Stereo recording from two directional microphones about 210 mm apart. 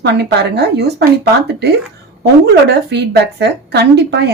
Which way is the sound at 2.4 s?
50° right (ahead or behind).